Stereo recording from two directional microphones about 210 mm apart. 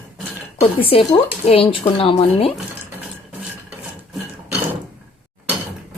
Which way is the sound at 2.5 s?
10° right (ahead or behind).